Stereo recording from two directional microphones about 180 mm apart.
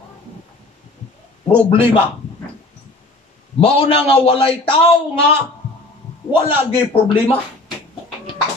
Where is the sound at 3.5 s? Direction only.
30° left (ahead or behind).